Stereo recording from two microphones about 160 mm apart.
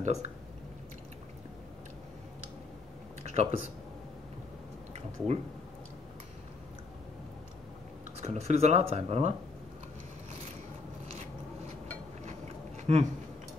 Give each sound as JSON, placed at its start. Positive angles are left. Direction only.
{"t": 0.0, "sound": "speech", "side_deg": -50}
{"t": 3.3, "sound": "speech", "side_deg": -45}
{"t": 8.2, "sound": "speech", "side_deg": -45}
{"t": 12.3, "sound": "a sound", "side_deg": -45}